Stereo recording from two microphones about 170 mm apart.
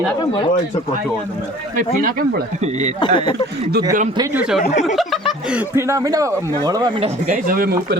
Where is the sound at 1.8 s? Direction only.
55° right (ahead or behind).